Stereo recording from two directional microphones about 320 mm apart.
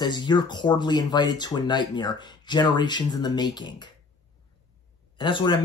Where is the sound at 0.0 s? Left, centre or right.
Centre.